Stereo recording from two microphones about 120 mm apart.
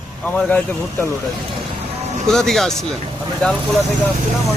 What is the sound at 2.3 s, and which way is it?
Speech, 5° left (ahead or behind).